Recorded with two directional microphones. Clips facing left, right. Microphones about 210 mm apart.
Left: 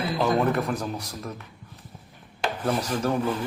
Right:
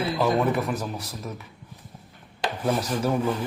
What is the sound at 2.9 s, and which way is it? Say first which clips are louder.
Speech: right 1 dB; 10° right (ahead or behind).